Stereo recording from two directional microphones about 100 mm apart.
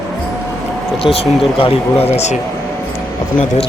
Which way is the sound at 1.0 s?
75° left (ahead or behind).